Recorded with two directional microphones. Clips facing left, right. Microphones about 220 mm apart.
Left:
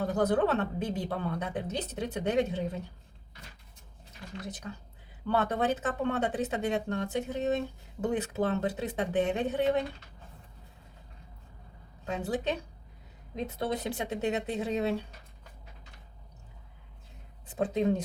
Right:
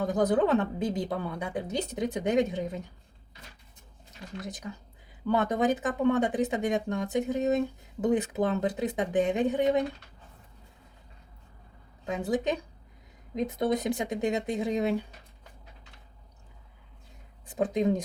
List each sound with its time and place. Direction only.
0.0 s a woman's voice: 15° right (ahead or behind)
5.3 s a woman's voice: 15° right (ahead or behind)
13.3 s a woman's voice: 15° right (ahead or behind)
17.5 s a woman's voice: 15° right (ahead or behind)